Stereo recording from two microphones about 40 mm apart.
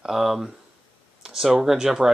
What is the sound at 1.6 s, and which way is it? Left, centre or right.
Speech, centre.